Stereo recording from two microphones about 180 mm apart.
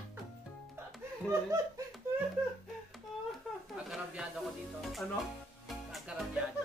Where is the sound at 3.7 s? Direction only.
5° right (ahead or behind).